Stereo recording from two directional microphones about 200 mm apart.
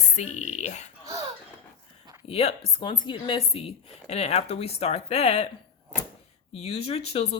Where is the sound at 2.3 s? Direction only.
30° left (ahead or behind).